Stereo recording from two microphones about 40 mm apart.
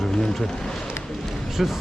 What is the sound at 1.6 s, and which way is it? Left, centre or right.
Speech, centre.